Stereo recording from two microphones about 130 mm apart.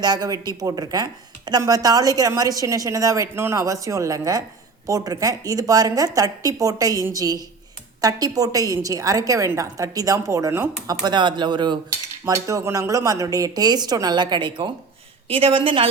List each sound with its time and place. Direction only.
0.0 s speech: 30° right (ahead or behind)
11.0 s speech: 35° right (ahead or behind)
12.2 s a woman's voice: 25° right (ahead or behind); by 15.9 s 40° right (ahead or behind)